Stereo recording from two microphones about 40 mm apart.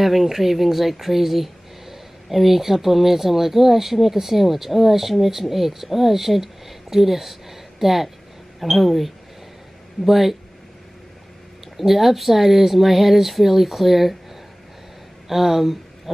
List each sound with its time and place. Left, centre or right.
0.0 s speech: centre
11.7 s speech: centre
15.2 s speech: centre